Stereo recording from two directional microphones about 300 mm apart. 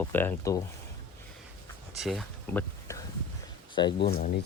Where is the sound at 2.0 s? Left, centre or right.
Centre.